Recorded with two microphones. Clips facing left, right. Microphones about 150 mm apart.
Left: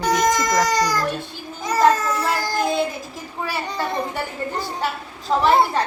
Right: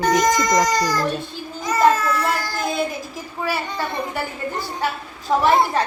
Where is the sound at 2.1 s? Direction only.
20° left (ahead or behind).